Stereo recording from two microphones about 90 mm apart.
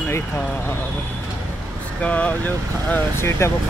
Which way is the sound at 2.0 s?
15° left (ahead or behind).